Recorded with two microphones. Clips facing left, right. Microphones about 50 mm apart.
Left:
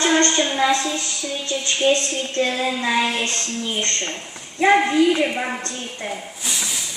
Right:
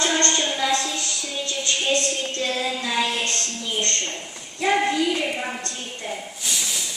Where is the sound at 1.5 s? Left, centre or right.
Left.